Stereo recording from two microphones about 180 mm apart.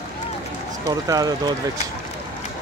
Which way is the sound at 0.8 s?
20° right (ahead or behind).